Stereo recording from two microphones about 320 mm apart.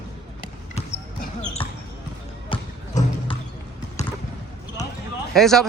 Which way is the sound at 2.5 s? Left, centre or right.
Centre.